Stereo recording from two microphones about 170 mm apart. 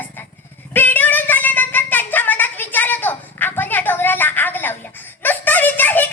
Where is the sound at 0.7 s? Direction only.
10° left (ahead or behind).